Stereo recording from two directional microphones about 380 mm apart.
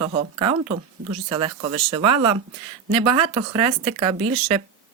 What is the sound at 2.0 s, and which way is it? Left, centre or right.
Speech, right.